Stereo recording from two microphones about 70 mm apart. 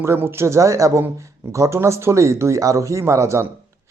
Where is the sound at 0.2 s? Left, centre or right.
Right.